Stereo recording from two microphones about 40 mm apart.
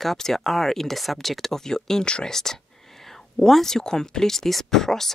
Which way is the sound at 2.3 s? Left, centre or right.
Centre.